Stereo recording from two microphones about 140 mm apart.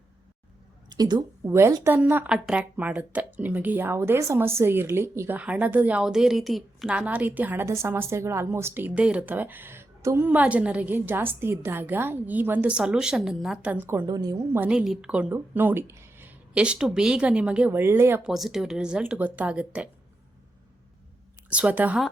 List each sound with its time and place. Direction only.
0.9 s a woman's voice: 30° right (ahead or behind)
14.1 s a woman's voice: 30° right (ahead or behind)
14.7 s a woman's voice: 5° right (ahead or behind)
18.2 s speech: centre (ahead or behind)
21.5 s a woman's voice: 10° right (ahead or behind)